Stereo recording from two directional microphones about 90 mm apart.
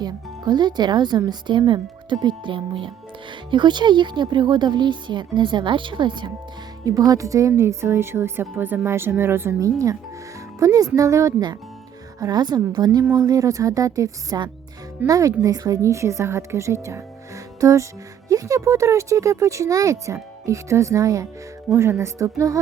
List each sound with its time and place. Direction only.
0.0 s a woman's voice: 55° right (ahead or behind)
6.8 s speech: 45° right (ahead or behind); by 9.6 s 25° right (ahead or behind)
9.6 s a woman's voice: 40° right (ahead or behind)